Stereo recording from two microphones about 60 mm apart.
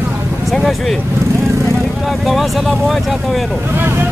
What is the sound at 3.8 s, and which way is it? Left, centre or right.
Speech, right.